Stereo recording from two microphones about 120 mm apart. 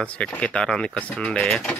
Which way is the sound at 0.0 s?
10° left (ahead or behind).